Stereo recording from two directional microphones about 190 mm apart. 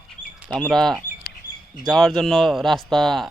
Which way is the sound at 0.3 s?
5° right (ahead or behind).